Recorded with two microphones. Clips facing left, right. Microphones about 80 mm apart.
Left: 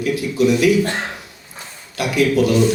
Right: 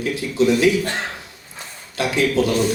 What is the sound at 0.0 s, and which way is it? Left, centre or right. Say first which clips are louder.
Speech: left 2 dB; right.